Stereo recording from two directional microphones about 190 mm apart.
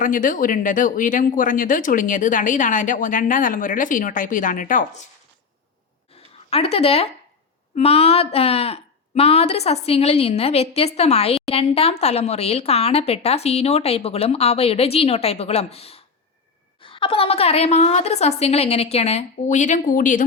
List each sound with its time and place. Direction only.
0.0 s speech: 45° left (ahead or behind)
6.5 s speech: 30° left (ahead or behind)